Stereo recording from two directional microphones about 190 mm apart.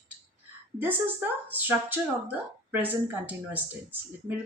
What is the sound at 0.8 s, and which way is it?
Speech, 10° right (ahead or behind).